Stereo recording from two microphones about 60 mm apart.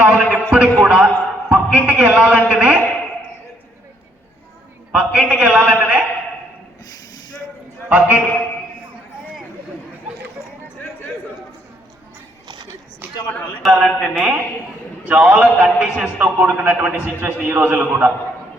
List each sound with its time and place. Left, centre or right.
0.0 s a sound: right
2.0 s a man's voice: right
4.9 s a man's voice: centre
7.9 s a man's voice: right
13.7 s speech: centre
15.0 s a man's voice: right
16.1 s a man's voice: right